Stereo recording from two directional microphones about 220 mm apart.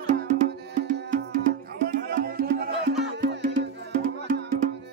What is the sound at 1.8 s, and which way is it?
Music, 40° right (ahead or behind).